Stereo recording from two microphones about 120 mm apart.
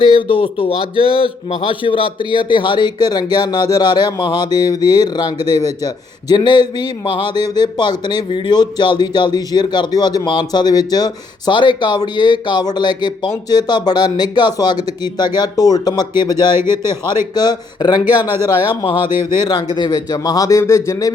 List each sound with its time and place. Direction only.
0.0 s a man's voice: 50° left (ahead or behind)
16.6 s a man's voice: 20° right (ahead or behind)
17.3 s a man's voice: 35° left (ahead or behind)
18.0 s speech: 15° right (ahead or behind)
18.8 s a man's voice: 40° left (ahead or behind)